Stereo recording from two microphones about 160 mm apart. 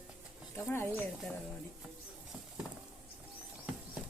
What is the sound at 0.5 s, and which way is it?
Speech, 15° left (ahead or behind).